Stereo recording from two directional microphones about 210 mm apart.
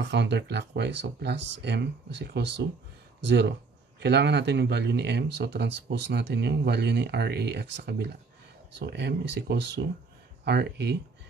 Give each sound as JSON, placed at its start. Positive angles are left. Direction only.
{"t": 0.0, "sound": "speech", "side_deg": -55}